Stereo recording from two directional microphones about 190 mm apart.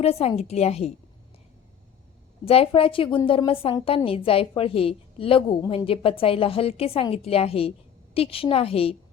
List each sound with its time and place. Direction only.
0.0 s a woman's voice: 30° left (ahead or behind)
2.4 s a woman's voice: 30° left (ahead or behind)